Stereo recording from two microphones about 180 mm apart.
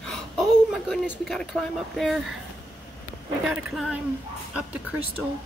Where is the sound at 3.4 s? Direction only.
5° right (ahead or behind).